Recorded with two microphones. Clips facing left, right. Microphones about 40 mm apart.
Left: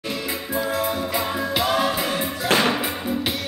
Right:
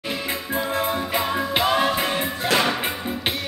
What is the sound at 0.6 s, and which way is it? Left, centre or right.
Music, right.